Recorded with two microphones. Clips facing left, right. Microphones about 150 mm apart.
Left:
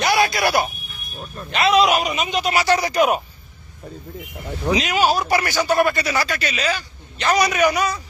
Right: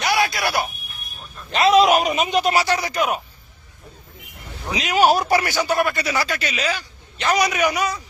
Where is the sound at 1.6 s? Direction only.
45° right (ahead or behind).